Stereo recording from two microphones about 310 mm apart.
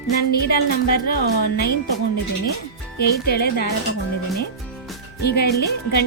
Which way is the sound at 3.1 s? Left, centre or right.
Left.